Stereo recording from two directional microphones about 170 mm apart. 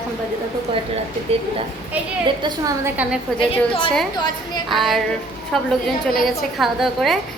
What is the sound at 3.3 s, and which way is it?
Speech, 5° left (ahead or behind).